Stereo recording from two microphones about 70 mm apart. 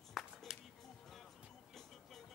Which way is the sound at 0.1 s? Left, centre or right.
Centre.